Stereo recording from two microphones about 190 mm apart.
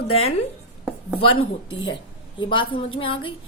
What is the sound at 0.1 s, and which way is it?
Speech, 35° left (ahead or behind).